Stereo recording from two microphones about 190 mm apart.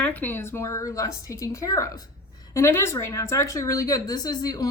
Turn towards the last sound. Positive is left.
turn(degrees=20)  # may be behind; listen again after turning